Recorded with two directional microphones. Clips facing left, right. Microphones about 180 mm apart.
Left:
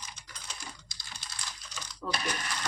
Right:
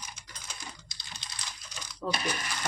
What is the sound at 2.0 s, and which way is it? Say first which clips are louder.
Speech: right 3 dB; 30° right (ahead or behind).